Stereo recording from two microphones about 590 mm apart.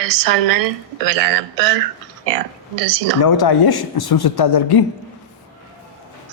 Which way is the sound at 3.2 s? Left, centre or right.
Left.